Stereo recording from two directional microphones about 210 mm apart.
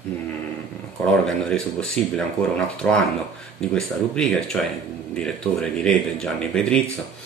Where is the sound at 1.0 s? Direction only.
Centre (ahead or behind).